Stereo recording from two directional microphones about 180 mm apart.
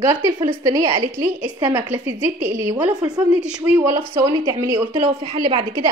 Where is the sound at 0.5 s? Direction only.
20° right (ahead or behind).